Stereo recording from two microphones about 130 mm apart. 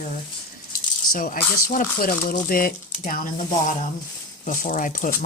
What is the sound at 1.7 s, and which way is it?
Speech, 90° left.